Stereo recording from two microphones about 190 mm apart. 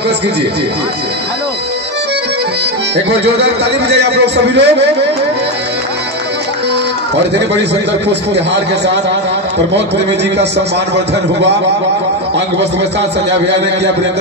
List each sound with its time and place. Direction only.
3.1 s a man's voice: 60° right (ahead or behind)